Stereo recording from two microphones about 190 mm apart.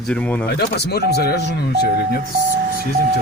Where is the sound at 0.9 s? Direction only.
55° left (ahead or behind).